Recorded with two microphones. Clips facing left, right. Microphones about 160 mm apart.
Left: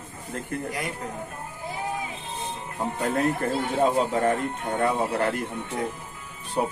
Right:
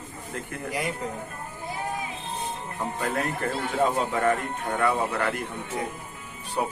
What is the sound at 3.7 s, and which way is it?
Speech, 20° left (ahead or behind).